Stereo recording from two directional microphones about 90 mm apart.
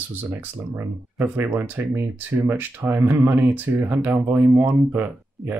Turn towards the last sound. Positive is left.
turn(degrees=-20)  # may be behind; listen again after turning